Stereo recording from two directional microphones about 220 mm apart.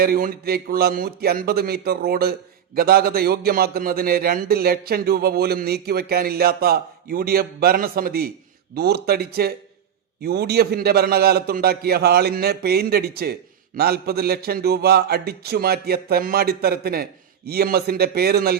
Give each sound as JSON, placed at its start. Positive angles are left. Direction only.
{"t": 0.0, "sound": "a man's voice", "side_deg": -40}